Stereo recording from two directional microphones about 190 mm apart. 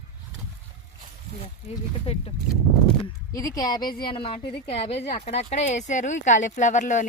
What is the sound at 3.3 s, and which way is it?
A woman's voice, 20° left (ahead or behind).